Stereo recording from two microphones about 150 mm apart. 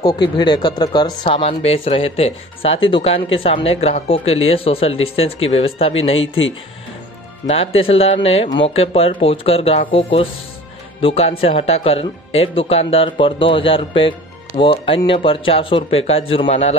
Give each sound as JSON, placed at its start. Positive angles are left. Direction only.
{"t": 0.0, "sound": "speech", "side_deg": 30}
{"t": 1.5, "sound": "speech", "side_deg": 45}